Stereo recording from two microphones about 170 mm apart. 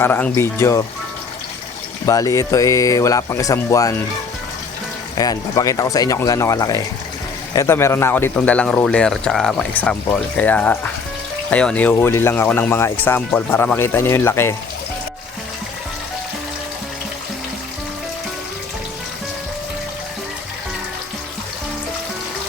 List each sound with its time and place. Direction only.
0.0 s speech: 15° left (ahead or behind)
2.0 s speech: 20° left (ahead or behind)
5.1 s speech: 20° left (ahead or behind)